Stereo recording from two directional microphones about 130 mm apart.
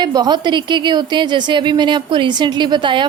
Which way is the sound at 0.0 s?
30° right (ahead or behind).